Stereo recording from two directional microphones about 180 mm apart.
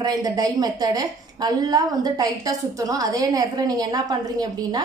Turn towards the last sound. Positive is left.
turn(degrees=-20)  # may be behind; listen again after turning